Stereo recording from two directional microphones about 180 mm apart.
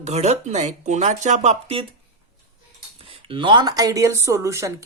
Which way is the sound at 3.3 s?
25° right (ahead or behind).